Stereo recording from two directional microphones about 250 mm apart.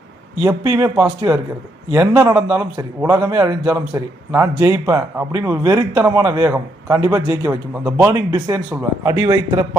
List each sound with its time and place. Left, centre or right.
0.4 s a man's voice: centre